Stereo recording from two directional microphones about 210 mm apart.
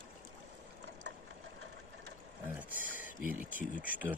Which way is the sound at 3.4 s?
40° right (ahead or behind).